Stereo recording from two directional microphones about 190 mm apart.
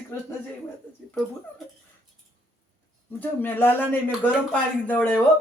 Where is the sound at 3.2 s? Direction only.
10° left (ahead or behind).